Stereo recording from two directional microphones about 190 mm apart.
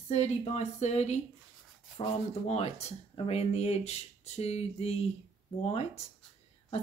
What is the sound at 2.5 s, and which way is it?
Speech, 35° left (ahead or behind).